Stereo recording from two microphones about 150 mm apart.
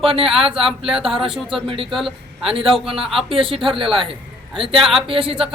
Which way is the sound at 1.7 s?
35° right (ahead or behind).